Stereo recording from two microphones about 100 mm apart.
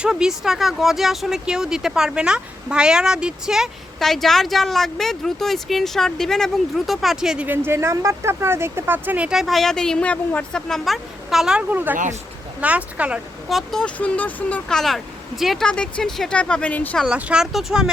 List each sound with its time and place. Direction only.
0.0 s speech: 5° right (ahead or behind)
7.4 s speech: 20° right (ahead or behind); by 11.6 s 5° right (ahead or behind)
11.7 s speech: 20° right (ahead or behind)
13.5 s speech: centre (ahead or behind)
14.7 s speech: 5° left (ahead or behind)
17.1 s speech: 10° right (ahead or behind)